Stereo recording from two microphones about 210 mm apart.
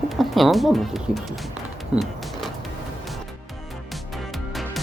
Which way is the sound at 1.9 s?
5° right (ahead or behind).